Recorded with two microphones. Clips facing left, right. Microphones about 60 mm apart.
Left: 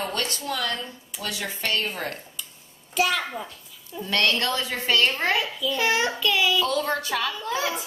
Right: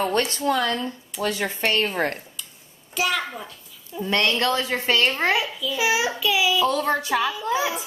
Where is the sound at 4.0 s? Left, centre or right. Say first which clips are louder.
Right 2 dB; right.